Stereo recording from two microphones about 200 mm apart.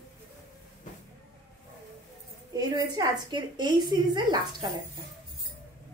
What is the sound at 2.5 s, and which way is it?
A woman's voice, 20° right (ahead or behind).